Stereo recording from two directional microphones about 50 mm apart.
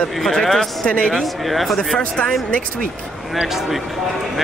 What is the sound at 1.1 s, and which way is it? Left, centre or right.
Speech, centre.